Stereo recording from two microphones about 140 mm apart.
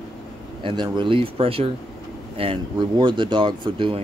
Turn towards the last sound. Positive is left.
turn(degrees=-35)  # may be behind; listen again after turning